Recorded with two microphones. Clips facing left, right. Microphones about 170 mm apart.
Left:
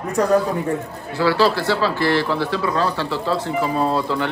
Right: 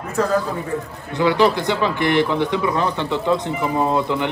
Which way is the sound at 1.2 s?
20° right (ahead or behind).